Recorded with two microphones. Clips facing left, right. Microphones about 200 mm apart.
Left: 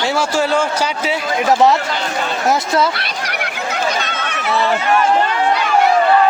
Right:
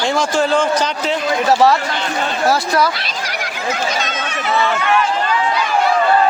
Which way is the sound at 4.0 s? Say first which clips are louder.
Right 1 dB; 60° left (ahead or behind).